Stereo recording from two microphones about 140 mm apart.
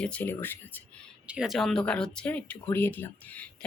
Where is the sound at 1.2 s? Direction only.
5° right (ahead or behind).